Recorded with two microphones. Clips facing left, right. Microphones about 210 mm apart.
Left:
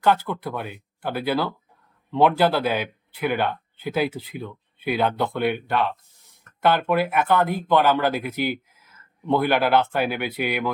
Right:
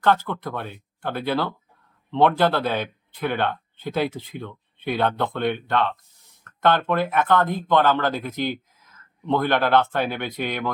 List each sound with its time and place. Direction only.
0.0 s speech: 10° left (ahead or behind)